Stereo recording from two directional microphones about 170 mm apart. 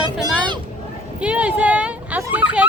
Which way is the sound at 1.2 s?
10° right (ahead or behind).